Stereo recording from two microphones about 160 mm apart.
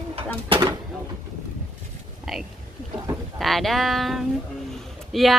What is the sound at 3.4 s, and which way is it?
Speech, centre (ahead or behind).